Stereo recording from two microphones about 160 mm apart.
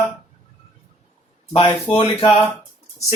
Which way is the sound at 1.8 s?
35° left (ahead or behind).